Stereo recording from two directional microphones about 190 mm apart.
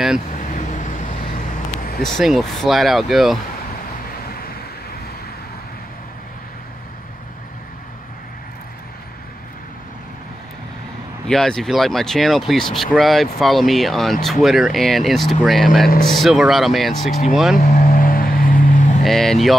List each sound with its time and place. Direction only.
0.3 s vehicle: 40° left (ahead or behind)
2.0 s speech: centre (ahead or behind)
11.2 s speech: 5° left (ahead or behind)
17.6 s vehicle: 45° left (ahead or behind)
19.0 s speech: centre (ahead or behind)